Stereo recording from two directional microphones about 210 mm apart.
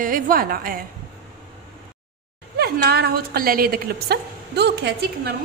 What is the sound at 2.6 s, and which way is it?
A woman's voice, 50° right (ahead or behind).